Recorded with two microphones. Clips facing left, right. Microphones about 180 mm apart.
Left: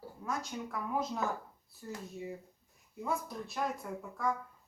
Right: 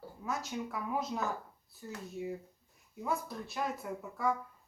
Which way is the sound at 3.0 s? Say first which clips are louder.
Even; centre (ahead or behind).